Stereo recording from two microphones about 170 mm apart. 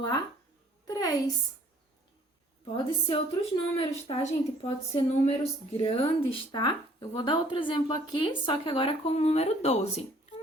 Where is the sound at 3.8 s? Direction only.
35° left (ahead or behind).